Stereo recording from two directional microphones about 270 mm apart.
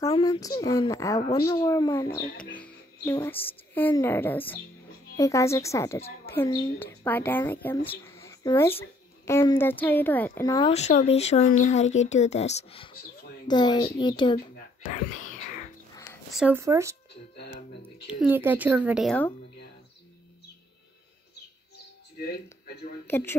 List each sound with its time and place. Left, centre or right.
0.0 s a woman's voice: centre
7.9 s a sound: centre
9.2 s a woman's voice: centre
14.5 s whispering: left
15.9 s a sound: centre
16.3 s speech: centre
18.2 s speech: centre
23.0 s a woman's voice: centre